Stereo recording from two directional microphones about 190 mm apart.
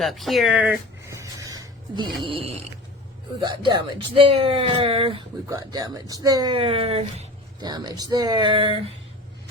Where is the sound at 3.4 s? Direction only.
25° right (ahead or behind).